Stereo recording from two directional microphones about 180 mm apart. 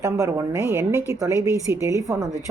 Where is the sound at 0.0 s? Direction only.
15° right (ahead or behind).